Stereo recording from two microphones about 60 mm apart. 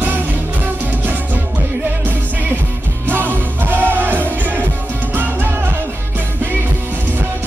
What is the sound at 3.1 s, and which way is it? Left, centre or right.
Music, right.